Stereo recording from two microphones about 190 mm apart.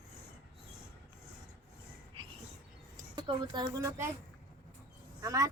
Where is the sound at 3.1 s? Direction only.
25° right (ahead or behind).